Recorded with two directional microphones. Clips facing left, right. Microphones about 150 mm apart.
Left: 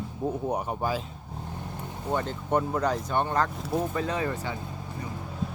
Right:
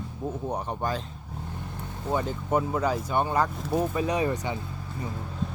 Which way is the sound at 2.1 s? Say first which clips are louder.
Right 1 dB; 5° right (ahead or behind).